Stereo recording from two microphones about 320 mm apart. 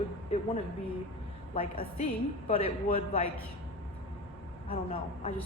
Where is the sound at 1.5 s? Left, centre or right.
Centre.